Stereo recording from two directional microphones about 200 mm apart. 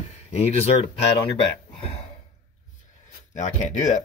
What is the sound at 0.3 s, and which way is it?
Speech, 30° left (ahead or behind).